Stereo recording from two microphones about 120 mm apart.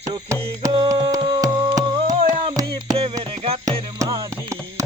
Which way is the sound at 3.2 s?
55° right (ahead or behind).